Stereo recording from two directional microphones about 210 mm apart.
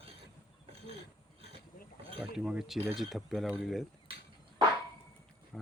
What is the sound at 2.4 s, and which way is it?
Speech, centre (ahead or behind).